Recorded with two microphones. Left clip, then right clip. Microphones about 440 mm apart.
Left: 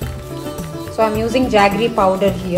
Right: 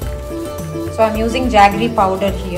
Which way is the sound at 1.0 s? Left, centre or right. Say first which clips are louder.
Right 1 dB; centre.